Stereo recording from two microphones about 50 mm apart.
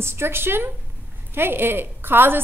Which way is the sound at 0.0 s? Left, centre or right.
Right.